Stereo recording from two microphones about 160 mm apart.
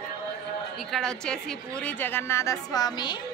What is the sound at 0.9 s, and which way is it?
A woman's voice, 5° left (ahead or behind).